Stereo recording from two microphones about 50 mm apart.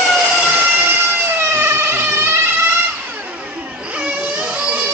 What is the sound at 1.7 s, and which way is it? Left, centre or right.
Emergency vehicle, right.